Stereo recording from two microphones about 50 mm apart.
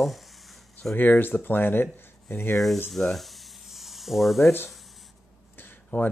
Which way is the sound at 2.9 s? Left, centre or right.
Centre.